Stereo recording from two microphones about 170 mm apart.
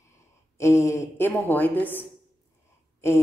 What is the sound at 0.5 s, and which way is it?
Speech, 15° left (ahead or behind).